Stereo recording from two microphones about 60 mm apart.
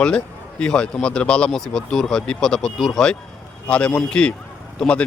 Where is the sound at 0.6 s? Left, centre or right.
Centre.